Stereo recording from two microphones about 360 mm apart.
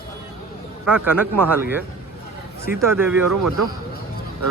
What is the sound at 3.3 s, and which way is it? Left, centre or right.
Speech, right.